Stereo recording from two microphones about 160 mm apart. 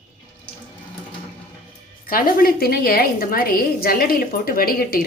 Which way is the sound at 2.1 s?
60° left (ahead or behind).